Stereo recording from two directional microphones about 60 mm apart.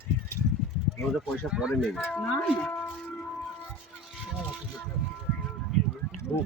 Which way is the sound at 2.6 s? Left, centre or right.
Left.